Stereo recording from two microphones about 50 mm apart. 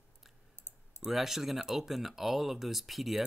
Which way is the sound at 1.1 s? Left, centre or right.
Centre.